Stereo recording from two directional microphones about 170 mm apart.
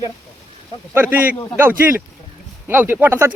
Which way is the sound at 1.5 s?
15° right (ahead or behind).